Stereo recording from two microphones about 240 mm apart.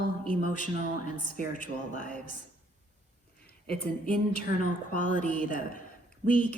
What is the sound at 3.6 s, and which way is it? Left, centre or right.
A woman's voice, left.